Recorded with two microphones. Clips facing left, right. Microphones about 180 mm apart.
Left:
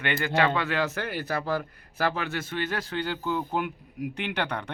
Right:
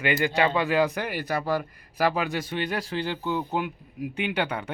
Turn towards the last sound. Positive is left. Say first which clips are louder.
# right 3 dB
turn(degrees=-5)  # may be behind; listen again after turning